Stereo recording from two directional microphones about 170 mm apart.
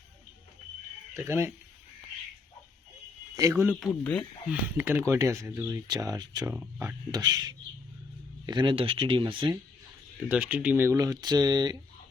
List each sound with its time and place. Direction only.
1.1 s speech: 15° right (ahead or behind)
3.3 s speech: 15° right (ahead or behind)
4.0 s speech: 5° left (ahead or behind)
4.4 s speech: 10° right (ahead or behind); by 9.6 s 30° right (ahead or behind)
10.2 s speech: 10° right (ahead or behind); by 11.8 s 25° right (ahead or behind)